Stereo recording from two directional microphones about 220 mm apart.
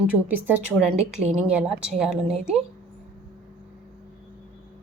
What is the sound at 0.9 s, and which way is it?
Speech, 30° right (ahead or behind).